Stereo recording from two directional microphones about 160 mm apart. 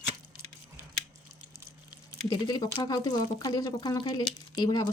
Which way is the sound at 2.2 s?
25° left (ahead or behind).